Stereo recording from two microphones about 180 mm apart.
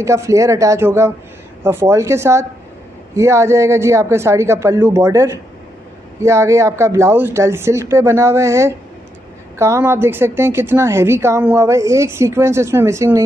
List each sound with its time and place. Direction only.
0.0 s a woman's voice: 15° right (ahead or behind)